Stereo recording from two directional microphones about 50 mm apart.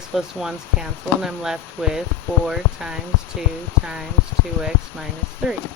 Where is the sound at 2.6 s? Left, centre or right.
Left.